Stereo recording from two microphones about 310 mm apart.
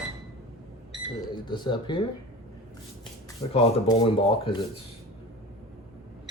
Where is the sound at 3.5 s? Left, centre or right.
Centre.